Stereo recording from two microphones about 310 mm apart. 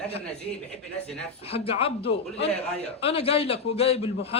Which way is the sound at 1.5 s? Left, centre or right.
Centre.